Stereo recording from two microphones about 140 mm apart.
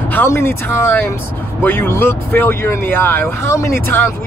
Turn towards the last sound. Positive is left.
turn(degrees=20)  # may be behind; listen again after turning